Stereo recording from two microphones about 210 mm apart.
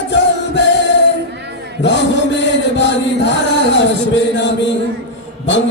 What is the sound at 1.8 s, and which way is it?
Chant, 55° left (ahead or behind).